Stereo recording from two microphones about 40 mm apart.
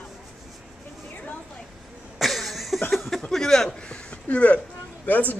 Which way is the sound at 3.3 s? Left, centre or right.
Centre.